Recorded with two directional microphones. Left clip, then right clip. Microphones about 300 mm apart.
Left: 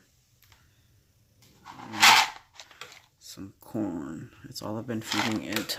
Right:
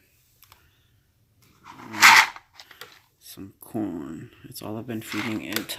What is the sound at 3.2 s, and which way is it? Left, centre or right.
Speech, centre.